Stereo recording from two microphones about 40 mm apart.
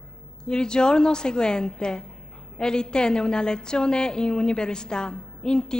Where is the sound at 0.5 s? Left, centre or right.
Left.